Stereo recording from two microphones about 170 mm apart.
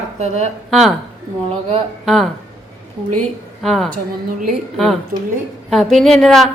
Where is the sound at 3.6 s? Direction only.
Centre (ahead or behind).